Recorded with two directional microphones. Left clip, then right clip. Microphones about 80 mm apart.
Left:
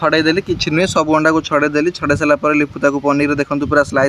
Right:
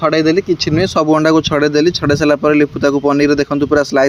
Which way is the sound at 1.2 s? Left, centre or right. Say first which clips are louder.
Right 2 dB; right.